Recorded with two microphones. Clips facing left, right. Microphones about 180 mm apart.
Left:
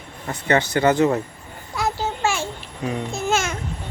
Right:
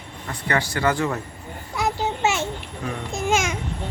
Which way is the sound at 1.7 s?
20° right (ahead or behind).